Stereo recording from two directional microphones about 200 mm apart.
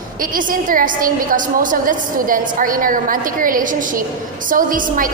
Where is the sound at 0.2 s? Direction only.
45° right (ahead or behind).